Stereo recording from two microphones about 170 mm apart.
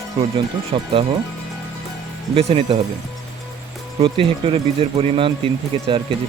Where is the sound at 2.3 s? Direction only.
35° right (ahead or behind).